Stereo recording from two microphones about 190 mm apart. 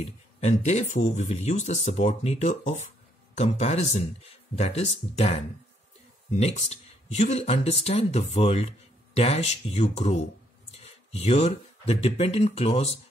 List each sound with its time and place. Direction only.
0.0 s speech: 35° left (ahead or behind)